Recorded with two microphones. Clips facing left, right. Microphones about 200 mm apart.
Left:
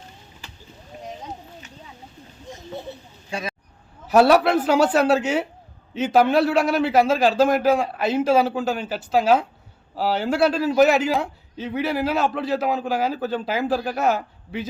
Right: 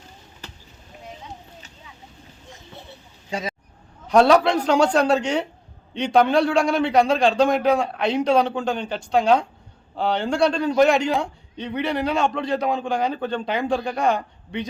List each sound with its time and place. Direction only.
3.2 s speech: 20° right (ahead or behind)
4.0 s speech: 5° left (ahead or behind)